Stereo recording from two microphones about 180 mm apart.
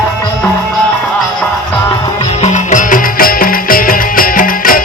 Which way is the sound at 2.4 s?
45° left (ahead or behind).